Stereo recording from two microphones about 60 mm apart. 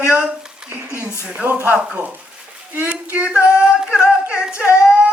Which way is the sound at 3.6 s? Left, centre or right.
Centre.